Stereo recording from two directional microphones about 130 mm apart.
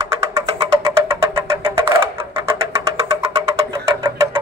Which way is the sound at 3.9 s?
25° right (ahead or behind).